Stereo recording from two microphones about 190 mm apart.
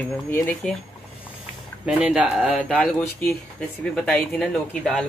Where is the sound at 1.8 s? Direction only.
5° right (ahead or behind).